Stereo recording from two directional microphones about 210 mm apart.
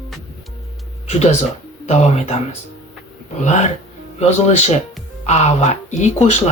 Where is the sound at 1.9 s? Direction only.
30° left (ahead or behind).